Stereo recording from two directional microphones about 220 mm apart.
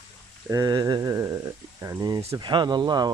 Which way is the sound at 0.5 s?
15° right (ahead or behind).